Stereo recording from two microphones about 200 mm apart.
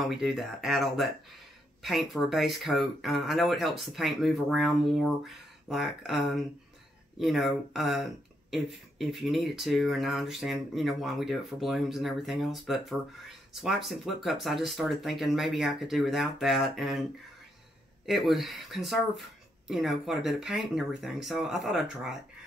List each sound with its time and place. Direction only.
0.0 s speech: centre (ahead or behind)
18.0 s speech: centre (ahead or behind)